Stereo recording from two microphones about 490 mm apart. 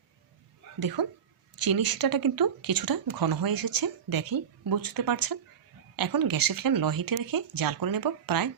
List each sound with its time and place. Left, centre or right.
0.8 s speech: right